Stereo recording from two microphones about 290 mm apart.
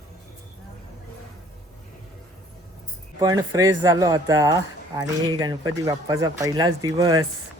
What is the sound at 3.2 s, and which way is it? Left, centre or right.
Speech, centre.